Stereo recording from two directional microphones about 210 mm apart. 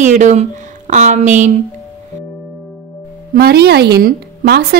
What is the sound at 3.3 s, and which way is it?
A woman's voice, 50° right (ahead or behind).